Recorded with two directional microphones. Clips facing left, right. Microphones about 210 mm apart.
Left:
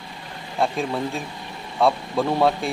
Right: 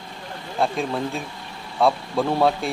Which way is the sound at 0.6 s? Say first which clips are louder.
Even; centre (ahead or behind).